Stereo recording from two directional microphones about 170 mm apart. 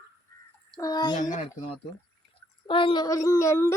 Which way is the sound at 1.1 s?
45° left (ahead or behind).